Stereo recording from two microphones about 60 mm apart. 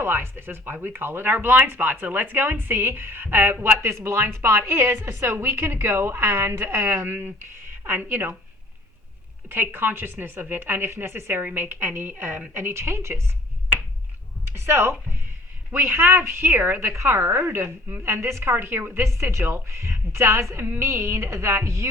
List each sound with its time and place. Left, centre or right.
0.0 s speech: right
9.5 s a woman's voice: right
14.4 s speech: right
16.9 s a woman's voice: right
18.5 s a woman's voice: right